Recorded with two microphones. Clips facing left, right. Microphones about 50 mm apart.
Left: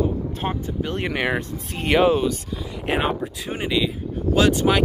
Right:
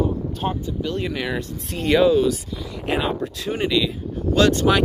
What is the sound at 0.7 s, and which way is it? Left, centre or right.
Speech, left.